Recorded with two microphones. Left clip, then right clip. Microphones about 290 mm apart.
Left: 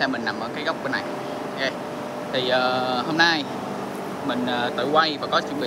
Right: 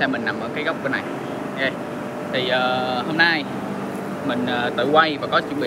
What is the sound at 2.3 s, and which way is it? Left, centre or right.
Speech, centre.